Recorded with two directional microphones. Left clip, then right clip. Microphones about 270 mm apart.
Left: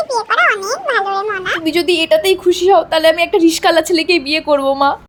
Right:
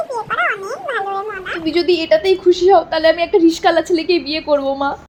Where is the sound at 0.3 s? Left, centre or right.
Left.